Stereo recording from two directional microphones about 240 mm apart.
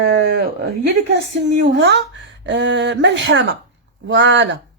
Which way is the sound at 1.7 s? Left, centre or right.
Right.